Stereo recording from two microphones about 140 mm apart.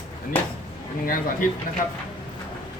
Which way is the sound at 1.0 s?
85° left.